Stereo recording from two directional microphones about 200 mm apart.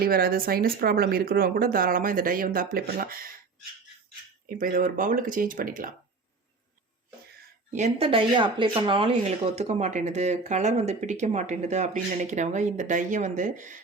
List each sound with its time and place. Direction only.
0.0 s speech: 50° right (ahead or behind)
4.4 s speech: 45° right (ahead or behind)
7.7 s speech: 35° right (ahead or behind)